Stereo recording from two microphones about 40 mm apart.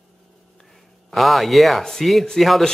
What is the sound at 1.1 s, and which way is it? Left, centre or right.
A man's voice, centre.